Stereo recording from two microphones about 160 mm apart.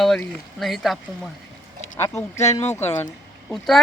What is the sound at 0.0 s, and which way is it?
Speech, centre (ahead or behind).